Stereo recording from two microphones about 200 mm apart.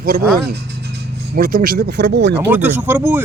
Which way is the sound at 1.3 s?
45° right (ahead or behind).